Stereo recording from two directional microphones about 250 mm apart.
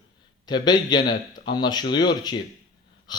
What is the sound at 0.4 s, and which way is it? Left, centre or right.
A man's voice, centre.